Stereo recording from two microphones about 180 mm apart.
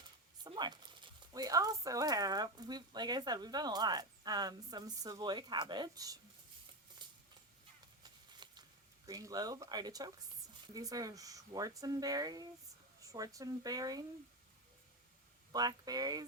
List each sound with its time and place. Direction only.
0.4 s speech: 25° right (ahead or behind)
7.0 s a sound: 25° right (ahead or behind)
9.0 s speech: 20° right (ahead or behind)
15.5 s speech: 20° right (ahead or behind)